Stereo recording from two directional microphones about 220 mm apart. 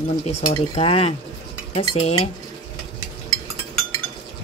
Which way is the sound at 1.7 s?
25° left (ahead or behind).